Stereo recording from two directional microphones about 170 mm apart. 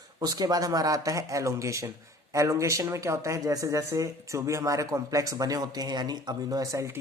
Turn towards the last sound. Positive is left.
turn(degrees=-20)  # may be behind; listen again after turning